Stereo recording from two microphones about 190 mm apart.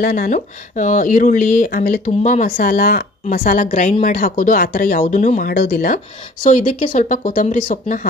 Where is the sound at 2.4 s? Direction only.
50° left (ahead or behind).